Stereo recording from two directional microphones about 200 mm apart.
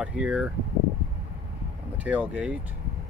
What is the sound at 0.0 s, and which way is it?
Speech, 5° right (ahead or behind).